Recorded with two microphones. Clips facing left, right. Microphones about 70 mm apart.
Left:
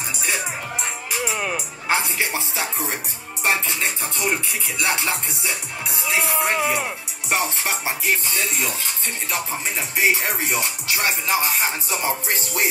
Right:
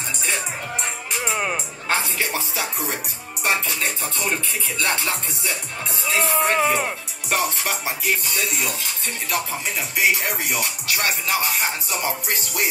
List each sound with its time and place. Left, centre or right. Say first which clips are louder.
1.1 s music: even; centre
1.9 s music: left 1 dB; left
7.2 s music: even; left
11.0 s music: left 1 dB; centre
11.5 s music: left 1 dB; left